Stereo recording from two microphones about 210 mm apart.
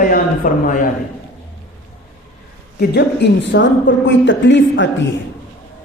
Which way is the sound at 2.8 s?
50° left (ahead or behind).